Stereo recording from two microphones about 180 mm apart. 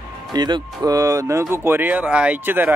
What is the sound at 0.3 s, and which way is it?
Speech, 25° right (ahead or behind).